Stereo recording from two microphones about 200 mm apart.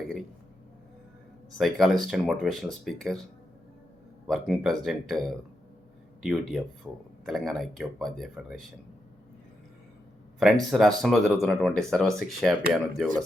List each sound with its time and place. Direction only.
1.5 s speech: centre (ahead or behind)
4.3 s speech: centre (ahead or behind)
6.2 s speech: centre (ahead or behind)
10.4 s speech: centre (ahead or behind)